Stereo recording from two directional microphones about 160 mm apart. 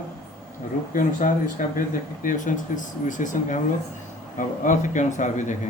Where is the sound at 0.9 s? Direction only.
55° left (ahead or behind).